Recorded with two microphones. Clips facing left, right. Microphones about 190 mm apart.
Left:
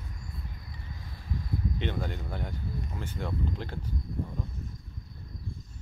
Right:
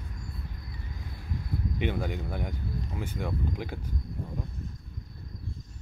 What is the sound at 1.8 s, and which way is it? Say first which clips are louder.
Speech: right 3 dB; 10° right (ahead or behind).